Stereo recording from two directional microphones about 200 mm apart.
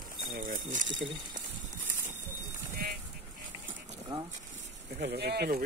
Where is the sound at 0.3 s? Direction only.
40° right (ahead or behind).